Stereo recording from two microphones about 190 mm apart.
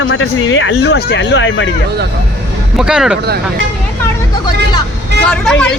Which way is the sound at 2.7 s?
5° right (ahead or behind).